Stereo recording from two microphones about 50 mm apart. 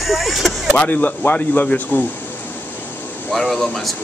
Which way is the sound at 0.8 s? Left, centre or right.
Left.